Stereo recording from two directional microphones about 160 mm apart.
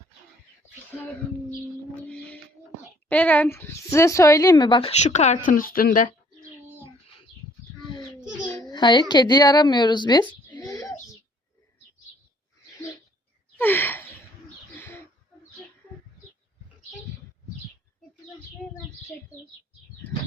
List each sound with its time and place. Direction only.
0.9 s speech: 10° left (ahead or behind)
2.0 s music: 5° left (ahead or behind)
3.1 s speech: 10° left (ahead or behind); by 4.9 s 30° left (ahead or behind)
4.9 s speech: 45° left (ahead or behind)
8.2 s a sound: 5° right (ahead or behind)
8.6 s speech: 30° left (ahead or behind)
10.5 s a sound: 25° left (ahead or behind)
13.6 s gasp: 10° left (ahead or behind)